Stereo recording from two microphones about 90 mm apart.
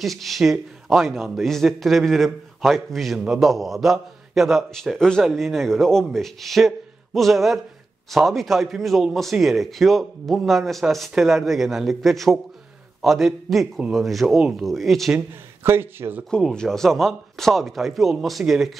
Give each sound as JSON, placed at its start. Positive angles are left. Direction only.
{"t": 0.0, "sound": "a man's voice", "side_deg": 0}
{"t": 15.6, "sound": "a man's voice", "side_deg": -25}
{"t": 16.3, "sound": "a man's voice", "side_deg": 10}